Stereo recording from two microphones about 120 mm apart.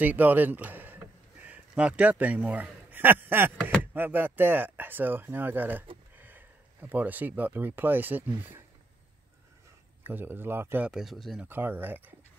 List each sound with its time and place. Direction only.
0.0 s speech: 15° right (ahead or behind)
10.0 s speech: 20° right (ahead or behind)
10.9 s speech: centre (ahead or behind)
11.4 s speech: 15° right (ahead or behind)